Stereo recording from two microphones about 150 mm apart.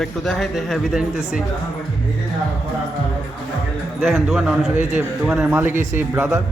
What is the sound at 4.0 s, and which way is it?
A man's voice, centre (ahead or behind).